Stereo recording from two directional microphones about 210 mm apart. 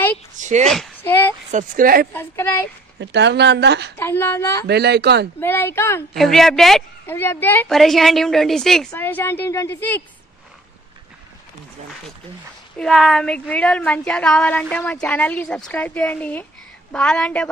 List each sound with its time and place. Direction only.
0.4 s a sound: 35° right (ahead or behind)
0.7 s a sound: centre (ahead or behind)
1.5 s speech: 40° right (ahead or behind)
2.1 s a woman's voice: 10° left (ahead or behind)
3.0 s speech: 55° right (ahead or behind)
4.0 s a woman's voice: 10° left (ahead or behind)
4.6 s speech: 50° right (ahead or behind)
5.4 s a woman's voice: 10° left (ahead or behind)
12.7 s a woman's voice: centre (ahead or behind)